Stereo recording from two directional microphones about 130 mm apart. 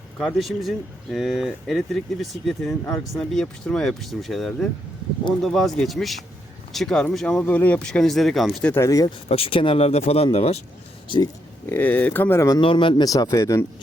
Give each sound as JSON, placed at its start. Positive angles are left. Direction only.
{"t": 0.2, "sound": "speech", "side_deg": 0}
{"t": 8.7, "sound": "speech", "side_deg": 25}
{"t": 9.0, "sound": "speech", "side_deg": 45}
{"t": 11.6, "sound": "speech", "side_deg": 15}
{"t": 12.5, "sound": "speech", "side_deg": 40}
{"t": 13.1, "sound": "speech", "side_deg": 25}